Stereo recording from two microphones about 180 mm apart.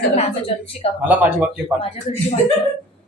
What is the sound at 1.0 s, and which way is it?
Speech, 10° right (ahead or behind).